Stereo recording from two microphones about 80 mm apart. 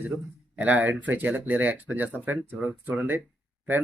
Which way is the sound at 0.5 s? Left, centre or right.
Centre.